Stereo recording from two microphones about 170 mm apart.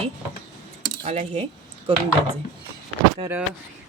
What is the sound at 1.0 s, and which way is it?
Speech, 40° right (ahead or behind).